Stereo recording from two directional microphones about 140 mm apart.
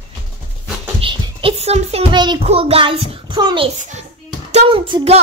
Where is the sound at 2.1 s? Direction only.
30° right (ahead or behind).